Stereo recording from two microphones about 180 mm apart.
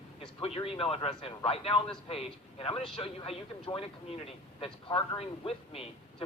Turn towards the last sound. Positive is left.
turn(degrees=30)  # may be behind; listen again after turning